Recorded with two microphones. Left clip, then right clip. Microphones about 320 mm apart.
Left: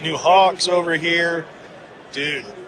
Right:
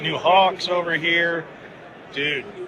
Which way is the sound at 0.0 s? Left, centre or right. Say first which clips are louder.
Left 2 dB; centre.